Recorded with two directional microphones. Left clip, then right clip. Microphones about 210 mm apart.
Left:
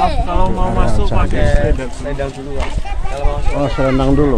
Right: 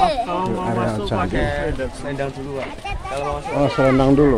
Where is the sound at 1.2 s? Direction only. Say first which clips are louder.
Left 6 dB; 45° right (ahead or behind).